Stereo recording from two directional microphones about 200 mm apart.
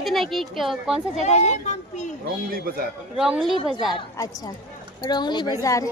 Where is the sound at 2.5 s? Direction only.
50° right (ahead or behind).